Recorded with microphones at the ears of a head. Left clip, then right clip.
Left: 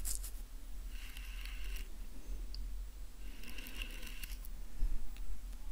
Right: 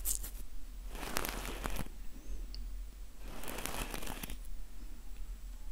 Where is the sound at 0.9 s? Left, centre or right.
Right.